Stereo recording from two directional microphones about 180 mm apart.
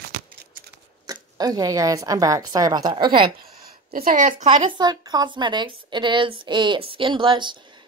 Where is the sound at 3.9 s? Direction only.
50° right (ahead or behind).